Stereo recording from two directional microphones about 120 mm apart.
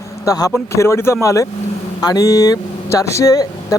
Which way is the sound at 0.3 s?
30° left (ahead or behind).